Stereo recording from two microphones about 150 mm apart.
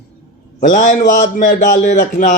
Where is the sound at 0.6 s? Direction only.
60° left (ahead or behind).